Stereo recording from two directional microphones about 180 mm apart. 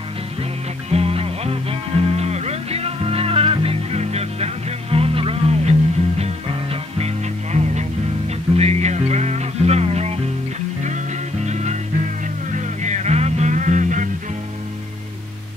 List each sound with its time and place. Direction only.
0.8 s music: 35° right (ahead or behind)
11.4 s music: 40° right (ahead or behind)
12.8 s music: 40° right (ahead or behind)